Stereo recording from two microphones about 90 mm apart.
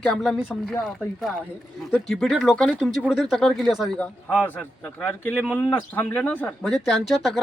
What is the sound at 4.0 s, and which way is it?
A man's voice, 15° left (ahead or behind).